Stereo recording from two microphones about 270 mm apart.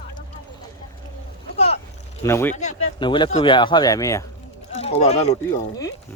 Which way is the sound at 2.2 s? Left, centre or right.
Centre.